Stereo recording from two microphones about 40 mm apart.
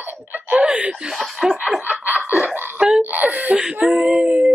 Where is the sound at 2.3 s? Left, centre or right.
Right.